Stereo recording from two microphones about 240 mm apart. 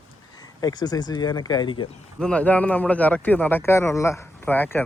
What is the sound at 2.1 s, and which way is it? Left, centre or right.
Speech, centre.